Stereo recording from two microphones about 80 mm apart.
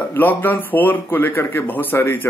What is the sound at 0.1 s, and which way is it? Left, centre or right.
Speech, left.